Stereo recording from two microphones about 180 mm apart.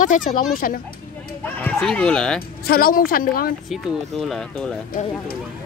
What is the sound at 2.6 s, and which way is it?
Speech, 55° left (ahead or behind).